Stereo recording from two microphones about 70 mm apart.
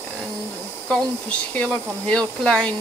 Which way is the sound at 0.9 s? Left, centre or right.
Centre.